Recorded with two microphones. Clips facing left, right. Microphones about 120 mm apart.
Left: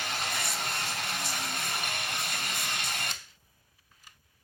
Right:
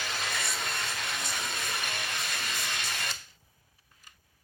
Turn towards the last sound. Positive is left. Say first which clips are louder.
# even
turn(degrees=55)  # may be behind; listen again after turning